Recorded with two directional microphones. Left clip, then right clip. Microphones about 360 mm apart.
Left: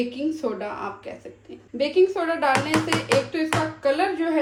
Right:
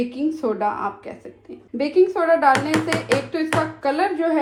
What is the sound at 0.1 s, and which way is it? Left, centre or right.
A woman's voice, centre.